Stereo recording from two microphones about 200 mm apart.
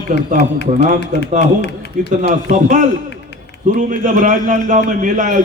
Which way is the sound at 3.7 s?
40° right (ahead or behind).